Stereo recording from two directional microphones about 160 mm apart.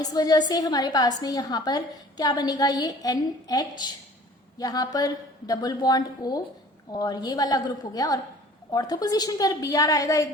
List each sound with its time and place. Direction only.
0.0 s a woman's voice: 25° left (ahead or behind)